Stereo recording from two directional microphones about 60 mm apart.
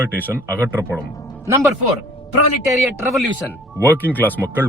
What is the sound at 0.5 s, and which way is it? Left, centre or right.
Speech, right.